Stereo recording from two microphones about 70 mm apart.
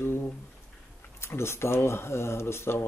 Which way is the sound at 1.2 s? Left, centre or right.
Left.